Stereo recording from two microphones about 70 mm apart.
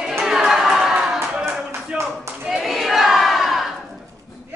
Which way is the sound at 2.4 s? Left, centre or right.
Centre.